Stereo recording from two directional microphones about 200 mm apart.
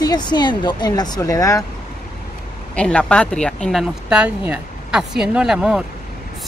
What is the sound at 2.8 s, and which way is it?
Speech, 5° left (ahead or behind).